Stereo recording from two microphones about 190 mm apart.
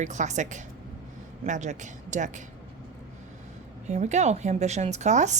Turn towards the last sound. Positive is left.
turn(degrees=-40)  # may be behind; listen again after turning